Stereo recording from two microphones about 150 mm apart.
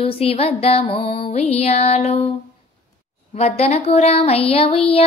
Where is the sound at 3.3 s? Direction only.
45° left (ahead or behind).